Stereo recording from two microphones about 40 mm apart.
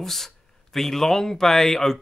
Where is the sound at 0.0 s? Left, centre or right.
Centre.